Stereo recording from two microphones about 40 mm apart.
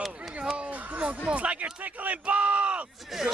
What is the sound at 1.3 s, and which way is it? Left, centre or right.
Speech, right.